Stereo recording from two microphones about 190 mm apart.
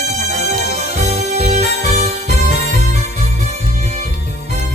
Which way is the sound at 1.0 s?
35° right (ahead or behind).